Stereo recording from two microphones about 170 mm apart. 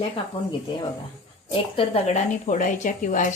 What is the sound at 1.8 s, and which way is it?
Speech, 35° left (ahead or behind).